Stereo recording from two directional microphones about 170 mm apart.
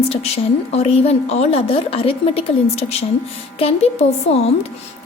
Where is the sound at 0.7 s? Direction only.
35° left (ahead or behind).